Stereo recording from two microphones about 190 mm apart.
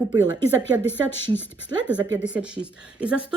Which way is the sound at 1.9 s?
5° right (ahead or behind).